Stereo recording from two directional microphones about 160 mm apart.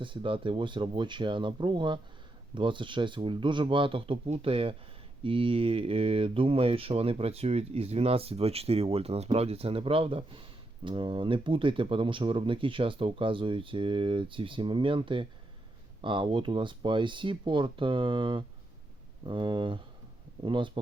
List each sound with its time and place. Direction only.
0.0 s speech: 30° right (ahead or behind)